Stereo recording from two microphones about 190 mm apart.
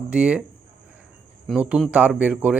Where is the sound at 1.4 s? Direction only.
5° right (ahead or behind).